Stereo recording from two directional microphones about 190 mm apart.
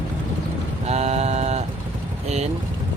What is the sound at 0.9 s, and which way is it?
Speech, 35° right (ahead or behind).